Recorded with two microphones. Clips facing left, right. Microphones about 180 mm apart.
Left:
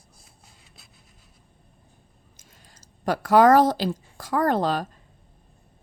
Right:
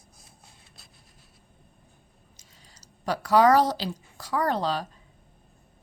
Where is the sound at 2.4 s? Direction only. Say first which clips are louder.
Left 4 dB; 50° left (ahead or behind).